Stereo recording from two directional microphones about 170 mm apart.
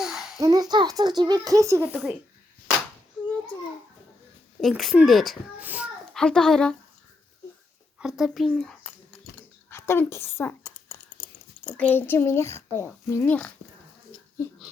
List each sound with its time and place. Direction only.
0.0 s a sound: centre (ahead or behind)
0.3 s speech: 20° right (ahead or behind)
1.9 s a child's voice: 5° right (ahead or behind)
4.8 s a child's voice: centre (ahead or behind)
6.1 s a child's voice: 5° left (ahead or behind)
7.9 s a child's voice: 5° right (ahead or behind)
9.6 s a sound: 15° left (ahead or behind)
11.8 s a child's voice: 10° left (ahead or behind)